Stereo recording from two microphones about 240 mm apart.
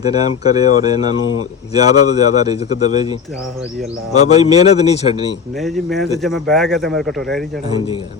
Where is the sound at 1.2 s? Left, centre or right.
Left.